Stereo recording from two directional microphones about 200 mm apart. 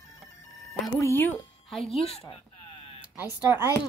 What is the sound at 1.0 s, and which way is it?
Speech, 10° left (ahead or behind).